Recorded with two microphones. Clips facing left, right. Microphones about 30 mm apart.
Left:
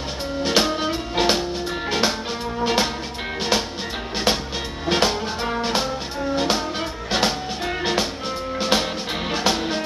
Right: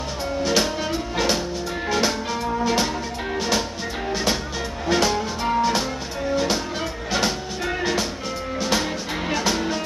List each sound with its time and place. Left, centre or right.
0.4 s music: left
4.8 s music: left